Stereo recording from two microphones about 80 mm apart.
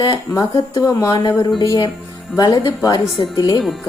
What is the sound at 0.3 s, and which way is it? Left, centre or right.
Speech, left.